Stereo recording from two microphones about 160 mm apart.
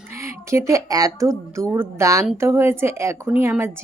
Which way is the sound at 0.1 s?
15° right (ahead or behind).